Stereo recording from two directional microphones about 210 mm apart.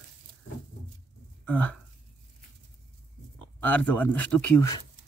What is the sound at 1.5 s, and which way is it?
Speech, 5° left (ahead or behind).